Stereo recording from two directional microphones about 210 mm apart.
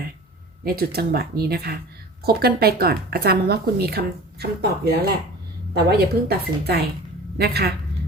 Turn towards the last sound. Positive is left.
turn(degrees=-50)  # may be behind; listen again after turning